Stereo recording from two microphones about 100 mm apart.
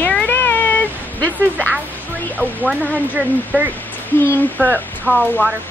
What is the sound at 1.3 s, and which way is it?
Speech, 15° right (ahead or behind).